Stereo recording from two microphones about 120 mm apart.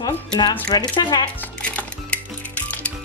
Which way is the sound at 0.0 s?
40° left (ahead or behind).